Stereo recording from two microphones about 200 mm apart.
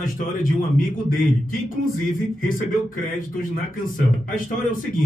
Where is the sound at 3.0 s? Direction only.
45° left (ahead or behind).